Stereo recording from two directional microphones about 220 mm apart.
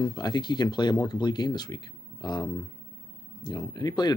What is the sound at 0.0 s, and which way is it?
Speech, 20° left (ahead or behind).